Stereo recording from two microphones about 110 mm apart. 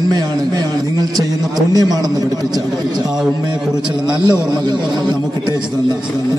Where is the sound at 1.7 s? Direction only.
35° right (ahead or behind).